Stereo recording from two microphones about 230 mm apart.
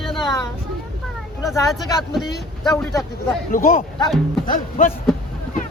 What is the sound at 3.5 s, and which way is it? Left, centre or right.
Speech, left.